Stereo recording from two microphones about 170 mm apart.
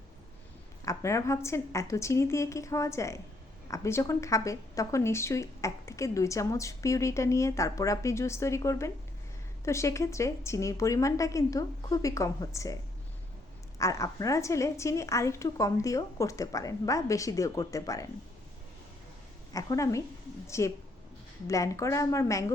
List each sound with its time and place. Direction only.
0.9 s a woman's voice: 15° left (ahead or behind)
13.7 s a woman's voice: 20° left (ahead or behind)
19.5 s a woman's voice: 20° left (ahead or behind)